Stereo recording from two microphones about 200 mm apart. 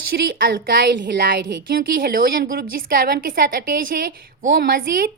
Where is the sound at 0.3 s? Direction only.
50° right (ahead or behind).